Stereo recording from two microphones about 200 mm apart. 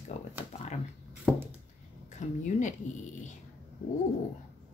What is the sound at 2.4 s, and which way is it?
Speech, 40° left (ahead or behind).